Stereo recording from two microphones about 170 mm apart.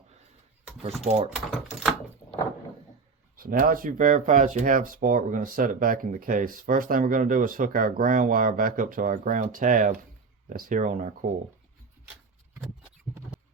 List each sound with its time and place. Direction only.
1.0 s speech: 35° right (ahead or behind)
1.5 s speech: 5° right (ahead or behind)
3.3 s speech: 60° right (ahead or behind)